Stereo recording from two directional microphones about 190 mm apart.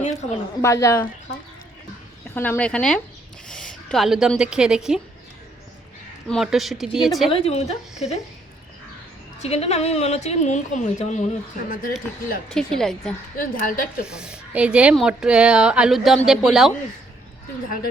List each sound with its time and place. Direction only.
0.0 s a sound: 35° left (ahead or behind)
0.6 s speech: 15° left (ahead or behind)
2.3 s speech: 10° left (ahead or behind)
6.2 s speech: centre (ahead or behind)
7.3 s a woman's voice: 30° left (ahead or behind)
9.4 s a woman's voice: 35° left (ahead or behind)
12.5 s speech: 5° left (ahead or behind)
13.4 s a woman's voice: 45° left (ahead or behind)
14.1 s speech: 5° right (ahead or behind)